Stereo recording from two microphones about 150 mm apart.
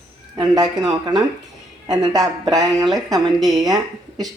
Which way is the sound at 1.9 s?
25° right (ahead or behind).